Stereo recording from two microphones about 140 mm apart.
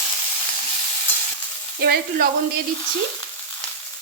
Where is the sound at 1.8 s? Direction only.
90° right.